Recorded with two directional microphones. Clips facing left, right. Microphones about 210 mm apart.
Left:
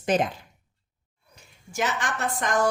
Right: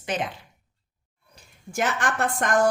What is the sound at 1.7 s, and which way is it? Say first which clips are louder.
Speech: right 3 dB; 55° right (ahead or behind).